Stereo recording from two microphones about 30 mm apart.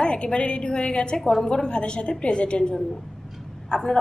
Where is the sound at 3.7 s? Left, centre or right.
Left.